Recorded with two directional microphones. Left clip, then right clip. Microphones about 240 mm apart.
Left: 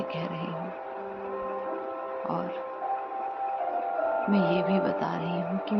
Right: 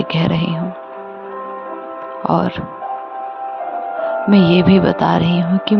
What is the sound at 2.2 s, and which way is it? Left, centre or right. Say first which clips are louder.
Speech: right 17 dB; right.